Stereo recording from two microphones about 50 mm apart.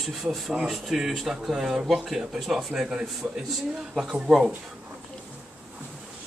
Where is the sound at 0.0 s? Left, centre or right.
Centre.